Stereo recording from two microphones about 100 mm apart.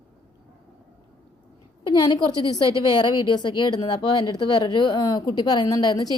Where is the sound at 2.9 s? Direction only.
50° left (ahead or behind).